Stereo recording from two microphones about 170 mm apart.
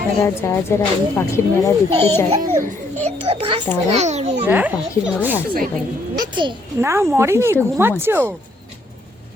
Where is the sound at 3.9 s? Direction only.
40° right (ahead or behind).